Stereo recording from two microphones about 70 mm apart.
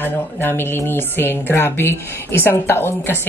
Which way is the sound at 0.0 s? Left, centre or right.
Left.